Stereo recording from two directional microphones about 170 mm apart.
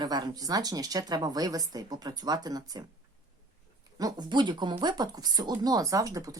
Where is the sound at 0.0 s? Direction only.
25° right (ahead or behind).